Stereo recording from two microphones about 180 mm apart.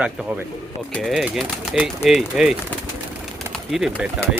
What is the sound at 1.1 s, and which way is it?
A man's voice, 5° right (ahead or behind).